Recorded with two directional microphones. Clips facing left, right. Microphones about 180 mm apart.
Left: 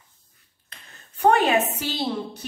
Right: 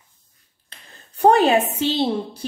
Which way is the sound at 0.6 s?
30° right (ahead or behind).